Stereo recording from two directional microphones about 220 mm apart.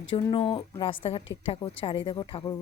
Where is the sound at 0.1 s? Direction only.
20° left (ahead or behind).